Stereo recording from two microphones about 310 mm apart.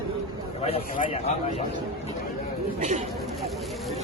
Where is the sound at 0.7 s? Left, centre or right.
Left.